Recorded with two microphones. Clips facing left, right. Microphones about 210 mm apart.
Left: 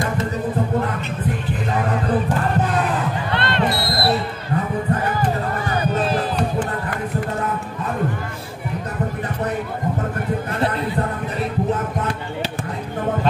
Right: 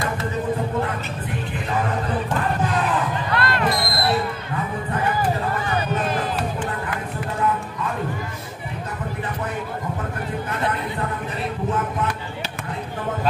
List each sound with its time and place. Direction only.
3.3 s basketball bounce: 30° left (ahead or behind)